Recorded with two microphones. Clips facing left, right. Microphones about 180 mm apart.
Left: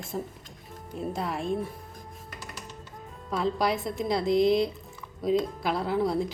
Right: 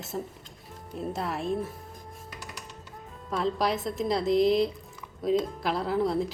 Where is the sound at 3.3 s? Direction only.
Centre (ahead or behind).